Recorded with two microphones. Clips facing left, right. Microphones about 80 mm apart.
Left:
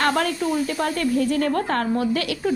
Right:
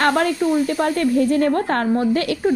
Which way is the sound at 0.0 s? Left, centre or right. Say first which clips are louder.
Right 4 dB; right.